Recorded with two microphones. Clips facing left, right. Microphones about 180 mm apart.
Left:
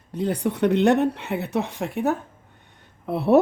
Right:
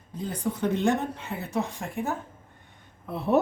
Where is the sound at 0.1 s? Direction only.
70° left (ahead or behind).